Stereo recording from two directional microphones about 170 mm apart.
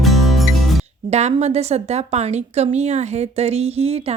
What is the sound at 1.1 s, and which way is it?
Speech, 40° right (ahead or behind).